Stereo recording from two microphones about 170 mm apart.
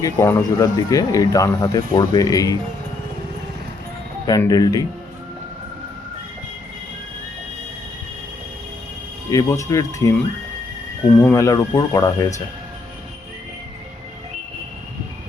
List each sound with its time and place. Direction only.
0.0 s speech: 15° left (ahead or behind)
4.3 s speech: 20° left (ahead or behind)
9.3 s speech: 20° left (ahead or behind)
11.2 s speech: 15° left (ahead or behind)